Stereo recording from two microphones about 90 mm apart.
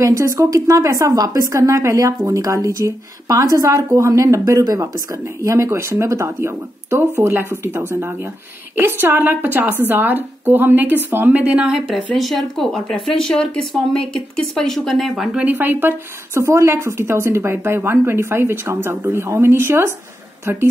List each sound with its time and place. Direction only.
0.0 s a woman's voice: 35° right (ahead or behind); by 11.8 s 10° right (ahead or behind)
12.1 s speech: centre (ahead or behind)
15.3 s a woman's voice: 20° right (ahead or behind)